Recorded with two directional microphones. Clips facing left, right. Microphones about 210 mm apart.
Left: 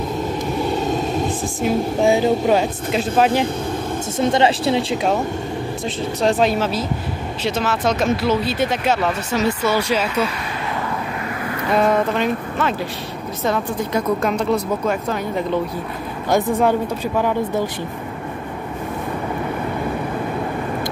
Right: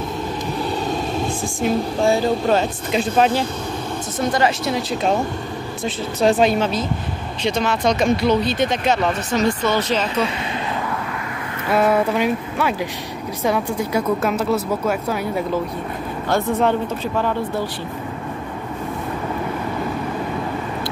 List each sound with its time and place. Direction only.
1.4 s speech: 5° left (ahead or behind)
2.0 s speech: 15° left (ahead or behind)
4.2 s speech: 25° left (ahead or behind)
5.9 s speech: centre (ahead or behind)
11.7 s speech: 5° right (ahead or behind)
16.3 s speech: 15° left (ahead or behind)